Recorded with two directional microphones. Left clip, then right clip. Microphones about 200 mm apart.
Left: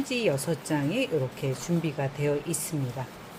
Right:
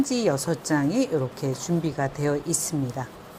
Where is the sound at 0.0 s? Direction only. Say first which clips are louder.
Right 3 dB; 20° right (ahead or behind).